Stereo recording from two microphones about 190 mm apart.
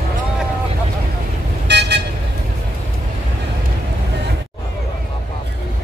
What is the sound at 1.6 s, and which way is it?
Vehicle, 60° right (ahead or behind).